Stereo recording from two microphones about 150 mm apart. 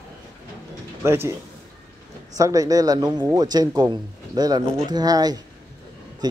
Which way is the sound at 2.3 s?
20° right (ahead or behind).